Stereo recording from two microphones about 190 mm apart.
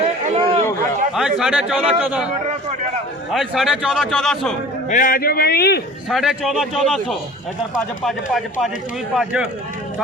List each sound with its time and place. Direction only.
0.3 s a sound: 30° right (ahead or behind)
1.1 s a man's voice: 5° right (ahead or behind)
3.3 s a man's voice: centre (ahead or behind)
4.9 s a man's voice: 45° left (ahead or behind)
6.1 s a man's voice: centre (ahead or behind)